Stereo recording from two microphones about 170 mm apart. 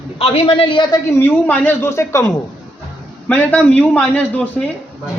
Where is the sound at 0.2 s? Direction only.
35° left (ahead or behind).